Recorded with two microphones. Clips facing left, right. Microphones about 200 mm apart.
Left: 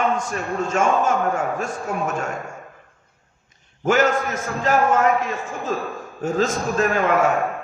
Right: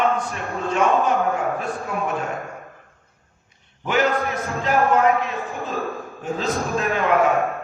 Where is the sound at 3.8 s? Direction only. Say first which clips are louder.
Left 2 dB; 45° left (ahead or behind).